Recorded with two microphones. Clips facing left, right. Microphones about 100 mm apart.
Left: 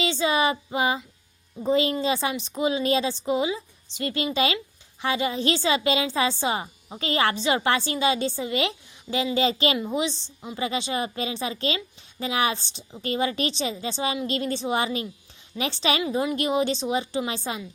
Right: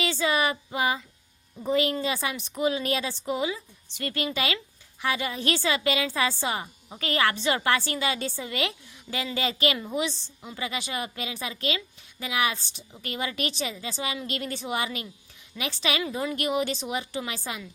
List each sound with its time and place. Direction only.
0.0 s female singing: 20° left (ahead or behind)
1.6 s a woman's voice: 25° left (ahead or behind)